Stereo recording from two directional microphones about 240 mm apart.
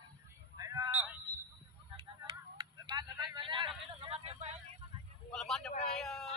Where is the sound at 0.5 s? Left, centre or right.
Centre.